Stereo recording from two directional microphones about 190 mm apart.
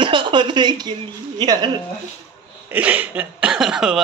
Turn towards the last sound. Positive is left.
turn(degrees=-5)  # may be behind; listen again after turning